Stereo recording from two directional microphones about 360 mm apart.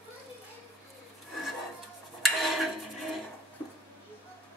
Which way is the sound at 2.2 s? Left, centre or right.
Centre.